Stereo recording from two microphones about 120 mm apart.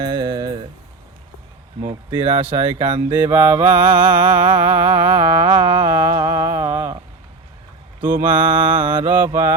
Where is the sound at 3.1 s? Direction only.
20° right (ahead or behind).